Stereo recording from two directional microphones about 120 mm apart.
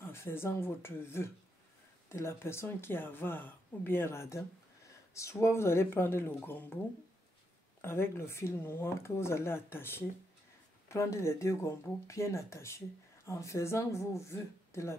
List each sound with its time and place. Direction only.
0.0 s speech: 20° left (ahead or behind)
7.8 s speech: 20° left (ahead or behind)